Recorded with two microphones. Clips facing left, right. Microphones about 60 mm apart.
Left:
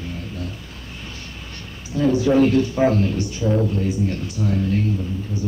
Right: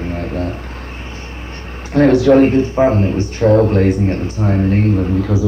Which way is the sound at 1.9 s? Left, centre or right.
Right.